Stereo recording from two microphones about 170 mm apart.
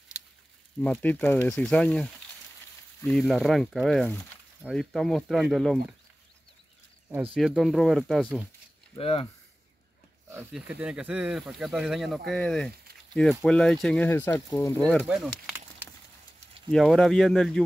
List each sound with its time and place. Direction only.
0.7 s speech: 5° left (ahead or behind)
3.1 s speech: centre (ahead or behind)
7.3 s speech: centre (ahead or behind)
8.9 s speech: 35° left (ahead or behind)
10.5 s speech: 5° right (ahead or behind); by 14.8 s 20° left (ahead or behind)
14.8 s speech: 5° left (ahead or behind)
16.7 s speech: 5° left (ahead or behind)